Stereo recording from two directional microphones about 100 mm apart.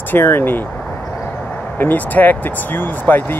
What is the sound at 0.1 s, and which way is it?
Speech, 20° left (ahead or behind).